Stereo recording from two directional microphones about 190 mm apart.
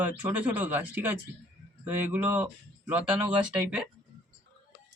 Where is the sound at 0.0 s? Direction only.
10° right (ahead or behind).